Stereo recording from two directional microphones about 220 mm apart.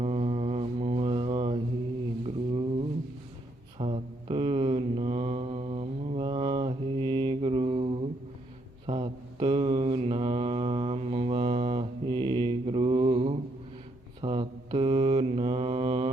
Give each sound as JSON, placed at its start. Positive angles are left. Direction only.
{"t": 0.0, "sound": "mantra", "side_deg": -30}
{"t": 3.8, "sound": "mantra", "side_deg": -25}
{"t": 8.9, "sound": "mantra", "side_deg": -25}